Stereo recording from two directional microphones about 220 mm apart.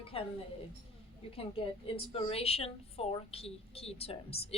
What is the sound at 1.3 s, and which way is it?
A woman's voice, 25° left (ahead or behind).